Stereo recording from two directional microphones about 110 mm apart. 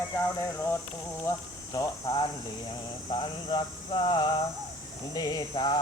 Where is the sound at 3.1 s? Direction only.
45° left (ahead or behind).